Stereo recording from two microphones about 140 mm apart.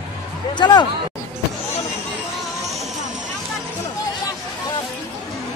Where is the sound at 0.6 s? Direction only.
30° left (ahead or behind).